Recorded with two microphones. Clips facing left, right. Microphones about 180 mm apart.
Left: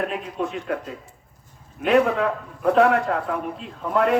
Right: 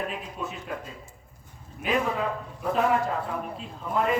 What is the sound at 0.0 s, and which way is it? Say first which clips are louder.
A man's voice: left 7 dB; 70° left (ahead or behind).